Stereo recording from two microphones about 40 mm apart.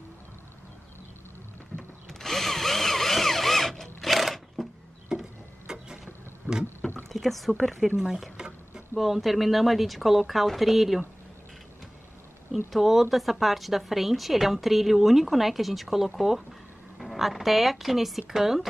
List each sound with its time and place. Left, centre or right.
1.7 s a sound: centre
2.0 s drill: centre
5.1 s a sound: centre
5.7 s vehicle: centre
7.1 s speech: centre
7.9 s speech: centre
8.4 s a sound: right
8.9 s speech: centre
12.5 s speech: centre